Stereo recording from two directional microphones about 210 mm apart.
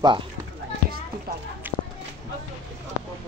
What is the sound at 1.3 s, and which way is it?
Speech, 45° right (ahead or behind).